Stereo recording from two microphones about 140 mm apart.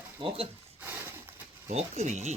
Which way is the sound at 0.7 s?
15° right (ahead or behind).